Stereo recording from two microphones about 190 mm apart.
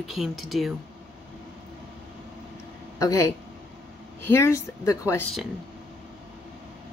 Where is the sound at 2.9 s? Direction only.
15° left (ahead or behind).